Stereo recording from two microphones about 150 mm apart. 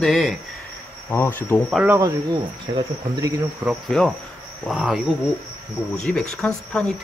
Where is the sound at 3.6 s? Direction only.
5° right (ahead or behind).